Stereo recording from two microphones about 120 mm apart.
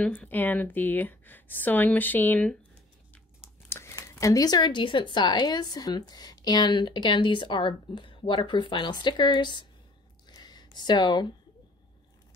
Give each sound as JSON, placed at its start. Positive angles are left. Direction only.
{"t": 0.0, "sound": "speech", "side_deg": 10}
{"t": 3.6, "sound": "speech", "side_deg": 20}
{"t": 10.3, "sound": "a sound", "side_deg": 35}